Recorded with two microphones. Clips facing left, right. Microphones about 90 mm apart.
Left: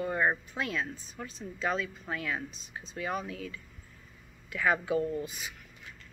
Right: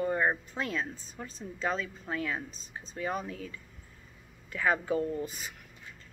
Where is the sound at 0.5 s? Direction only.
35° right (ahead or behind).